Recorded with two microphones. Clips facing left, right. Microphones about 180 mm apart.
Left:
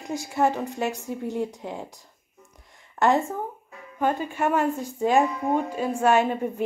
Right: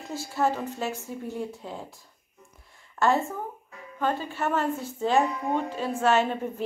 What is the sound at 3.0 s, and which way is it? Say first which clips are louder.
A woman's voice: left 3 dB; 15° left (ahead or behind).